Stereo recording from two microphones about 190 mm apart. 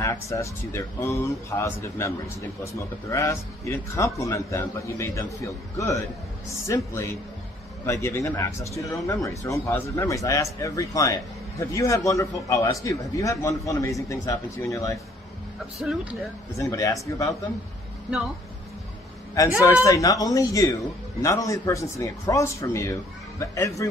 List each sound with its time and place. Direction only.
0.0 s speech: 15° left (ahead or behind)
15.8 s speech: 5° right (ahead or behind)
16.5 s speech: 15° left (ahead or behind)
19.6 s speech: 20° left (ahead or behind)